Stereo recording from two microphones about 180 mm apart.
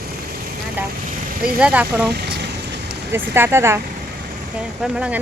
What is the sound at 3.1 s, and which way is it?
Speech, 15° right (ahead or behind).